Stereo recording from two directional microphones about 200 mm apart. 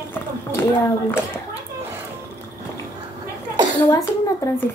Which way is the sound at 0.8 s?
10° left (ahead or behind).